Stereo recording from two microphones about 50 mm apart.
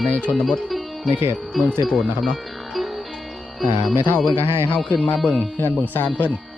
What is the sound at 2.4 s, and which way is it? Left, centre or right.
Music, centre.